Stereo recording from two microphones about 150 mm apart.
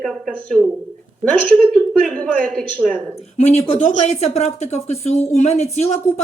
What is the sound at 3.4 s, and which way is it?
Speech, 45° left (ahead or behind).